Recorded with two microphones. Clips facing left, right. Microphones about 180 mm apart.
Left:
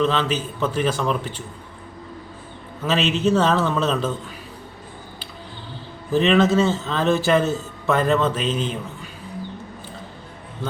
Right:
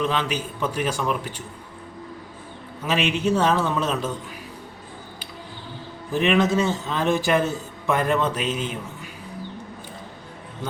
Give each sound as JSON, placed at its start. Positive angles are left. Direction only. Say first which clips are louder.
{"t": 0.0, "sound": "a man's voice", "louder": "left 3 dB", "side_deg": -10}
{"t": 2.8, "sound": "a man's voice", "louder": "left 2 dB", "side_deg": -10}
{"t": 6.1, "sound": "a man's voice", "louder": "left 3 dB", "side_deg": -15}